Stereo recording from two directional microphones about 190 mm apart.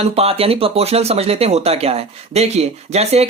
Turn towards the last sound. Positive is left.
turn(degrees=-35)  # may be behind; listen again after turning